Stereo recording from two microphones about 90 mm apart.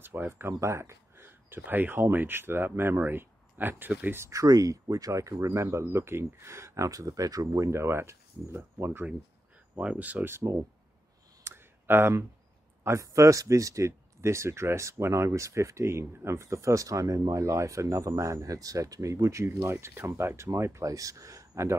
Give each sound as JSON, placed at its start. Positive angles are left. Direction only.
{"t": 0.0, "sound": "speech", "side_deg": -25}
{"t": 4.3, "sound": "speech", "side_deg": -40}
{"t": 9.8, "sound": "speech", "side_deg": -15}
{"t": 11.4, "sound": "clicking", "side_deg": -25}
{"t": 12.8, "sound": "speech", "side_deg": -35}